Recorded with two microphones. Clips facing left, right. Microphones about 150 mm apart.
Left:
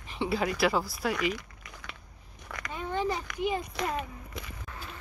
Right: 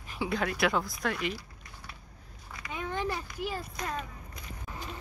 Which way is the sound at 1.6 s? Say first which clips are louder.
Left 2 dB; 90° left.